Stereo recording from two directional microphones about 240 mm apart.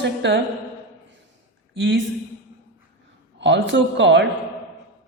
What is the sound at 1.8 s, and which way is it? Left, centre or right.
Speech, right.